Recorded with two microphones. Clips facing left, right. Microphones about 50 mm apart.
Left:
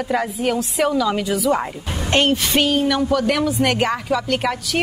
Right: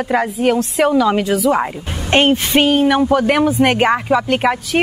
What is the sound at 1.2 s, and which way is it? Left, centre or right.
Speech, centre.